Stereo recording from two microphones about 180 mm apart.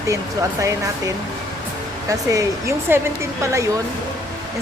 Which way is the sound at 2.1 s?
20° right (ahead or behind).